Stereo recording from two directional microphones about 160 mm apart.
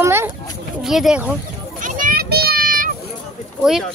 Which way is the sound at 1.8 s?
55° right (ahead or behind).